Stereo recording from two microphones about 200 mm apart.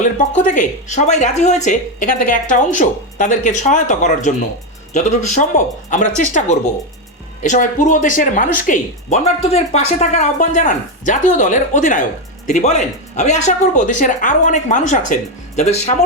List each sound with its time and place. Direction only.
0.0 s speech: 40° left (ahead or behind)